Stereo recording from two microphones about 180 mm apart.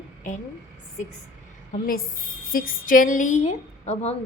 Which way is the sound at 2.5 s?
50° left (ahead or behind).